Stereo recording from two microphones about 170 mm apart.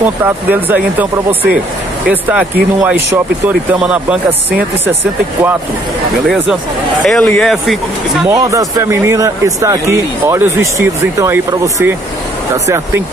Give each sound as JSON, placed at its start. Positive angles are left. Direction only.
{"t": 0.0, "sound": "speech", "side_deg": -10}
{"t": 2.0, "sound": "speech", "side_deg": -5}
{"t": 6.2, "sound": "speech", "side_deg": 0}
{"t": 8.3, "sound": "speech", "side_deg": -20}